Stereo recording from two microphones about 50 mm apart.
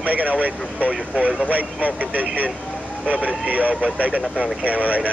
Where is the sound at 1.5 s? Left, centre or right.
Right.